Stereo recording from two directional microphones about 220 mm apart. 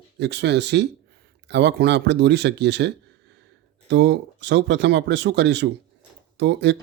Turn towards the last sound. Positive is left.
turn(degrees=-50)  # may be behind; listen again after turning